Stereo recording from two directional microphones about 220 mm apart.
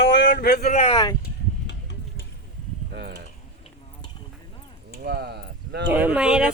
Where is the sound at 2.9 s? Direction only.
50° right (ahead or behind).